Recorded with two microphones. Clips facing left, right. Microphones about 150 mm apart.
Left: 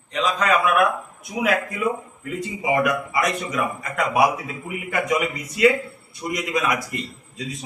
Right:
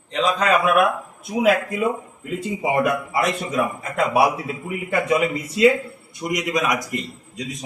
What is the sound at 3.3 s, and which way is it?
A man's voice, 30° right (ahead or behind).